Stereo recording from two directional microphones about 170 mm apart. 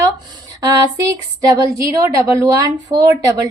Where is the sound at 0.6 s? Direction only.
20° right (ahead or behind).